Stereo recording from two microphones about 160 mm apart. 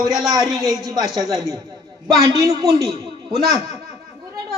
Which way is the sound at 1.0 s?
Centre (ahead or behind).